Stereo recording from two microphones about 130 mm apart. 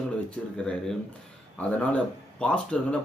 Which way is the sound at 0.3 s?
5° left (ahead or behind).